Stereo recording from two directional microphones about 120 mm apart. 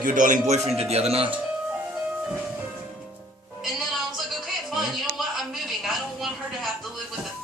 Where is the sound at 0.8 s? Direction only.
60° right (ahead or behind).